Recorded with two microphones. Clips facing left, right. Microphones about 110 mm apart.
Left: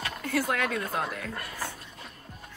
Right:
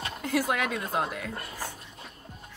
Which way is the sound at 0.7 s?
20° right (ahead or behind).